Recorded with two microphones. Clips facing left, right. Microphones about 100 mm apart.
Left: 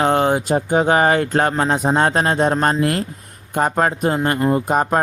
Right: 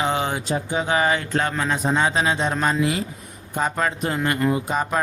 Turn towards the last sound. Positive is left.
turn(degrees=50)  # may be behind; listen again after turning